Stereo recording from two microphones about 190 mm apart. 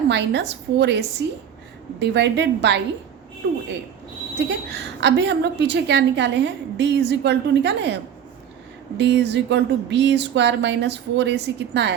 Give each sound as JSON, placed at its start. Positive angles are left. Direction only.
{"t": 0.1, "sound": "a woman's voice", "side_deg": -65}
{"t": 4.4, "sound": "a woman's voice", "side_deg": -65}
{"t": 9.0, "sound": "a woman's voice", "side_deg": -65}